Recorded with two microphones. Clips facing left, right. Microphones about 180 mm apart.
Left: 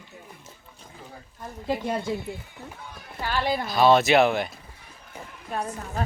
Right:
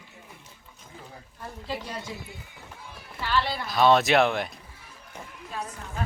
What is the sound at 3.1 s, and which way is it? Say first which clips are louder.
Speech: left 2 dB; 45° left (ahead or behind).